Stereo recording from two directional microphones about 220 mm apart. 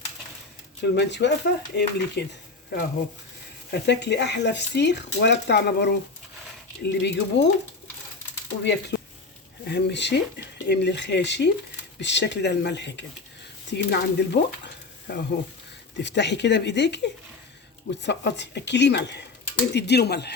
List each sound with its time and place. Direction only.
0.8 s speech: 50° left (ahead or behind)
8.6 s speech: 50° left (ahead or behind)